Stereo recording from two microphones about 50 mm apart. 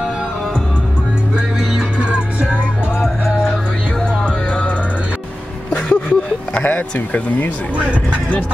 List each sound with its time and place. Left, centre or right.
2.0 s music: centre
5.7 s vehicle: left
7.7 s speech: right